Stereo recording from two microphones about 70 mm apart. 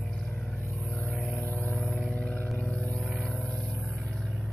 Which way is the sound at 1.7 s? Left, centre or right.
Centre.